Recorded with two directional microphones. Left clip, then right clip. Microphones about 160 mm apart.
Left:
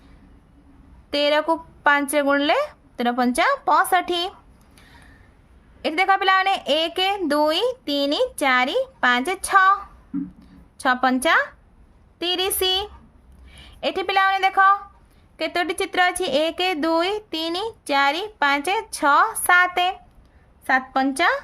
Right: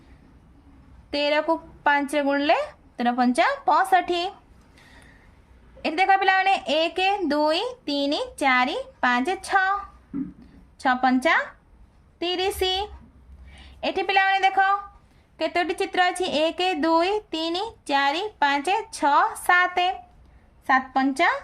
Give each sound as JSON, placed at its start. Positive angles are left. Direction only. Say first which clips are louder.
{"t": 1.1, "sound": "speech", "louder": "left 3 dB", "side_deg": 45}
{"t": 5.8, "sound": "a woman's voice", "louder": "left 1 dB", "side_deg": 35}